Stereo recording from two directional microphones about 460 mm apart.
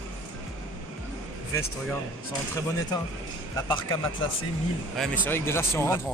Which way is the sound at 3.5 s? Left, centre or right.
Centre.